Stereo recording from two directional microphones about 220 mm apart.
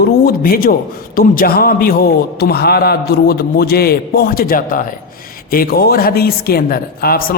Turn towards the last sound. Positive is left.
turn(degrees=40)  # may be behind; listen again after turning